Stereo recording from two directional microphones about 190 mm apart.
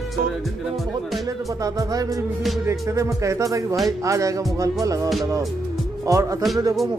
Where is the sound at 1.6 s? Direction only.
20° right (ahead or behind).